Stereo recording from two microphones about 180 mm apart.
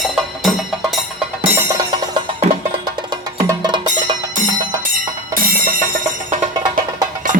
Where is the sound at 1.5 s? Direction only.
15° right (ahead or behind).